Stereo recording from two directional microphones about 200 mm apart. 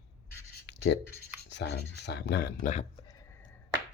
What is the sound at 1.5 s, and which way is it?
Speech, 60° left (ahead or behind).